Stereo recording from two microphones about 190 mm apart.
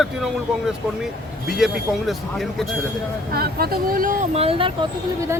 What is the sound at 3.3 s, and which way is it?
Speech, 55° right (ahead or behind).